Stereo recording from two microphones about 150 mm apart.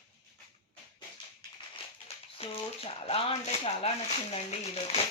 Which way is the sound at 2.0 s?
40° left (ahead or behind).